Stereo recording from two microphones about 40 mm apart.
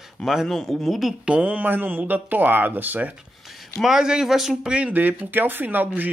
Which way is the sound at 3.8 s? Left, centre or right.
Centre.